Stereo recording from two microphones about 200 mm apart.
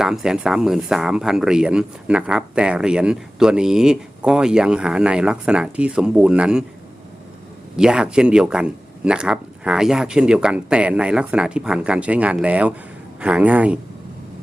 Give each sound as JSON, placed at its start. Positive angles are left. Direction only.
{"t": 0.0, "sound": "speech", "side_deg": 0}
{"t": 7.8, "sound": "speech", "side_deg": -5}